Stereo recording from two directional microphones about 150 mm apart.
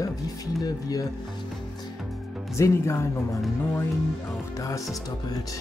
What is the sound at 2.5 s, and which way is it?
Speech, 20° left (ahead or behind).